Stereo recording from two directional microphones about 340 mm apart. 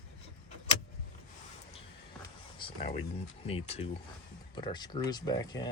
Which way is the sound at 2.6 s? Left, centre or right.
Centre.